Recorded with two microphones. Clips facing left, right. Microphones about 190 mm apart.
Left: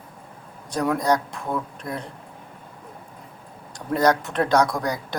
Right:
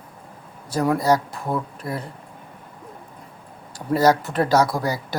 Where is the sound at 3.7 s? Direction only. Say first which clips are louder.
Right 2 dB; 5° right (ahead or behind).